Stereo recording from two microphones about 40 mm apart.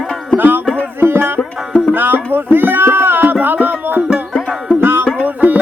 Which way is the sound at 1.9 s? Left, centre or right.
Right.